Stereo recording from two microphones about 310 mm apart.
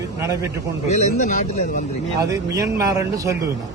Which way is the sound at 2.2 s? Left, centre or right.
Centre.